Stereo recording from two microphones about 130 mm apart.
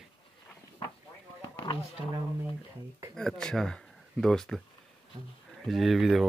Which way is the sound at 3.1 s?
5° left (ahead or behind).